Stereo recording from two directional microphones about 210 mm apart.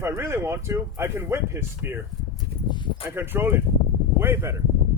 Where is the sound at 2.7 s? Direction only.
20° left (ahead or behind).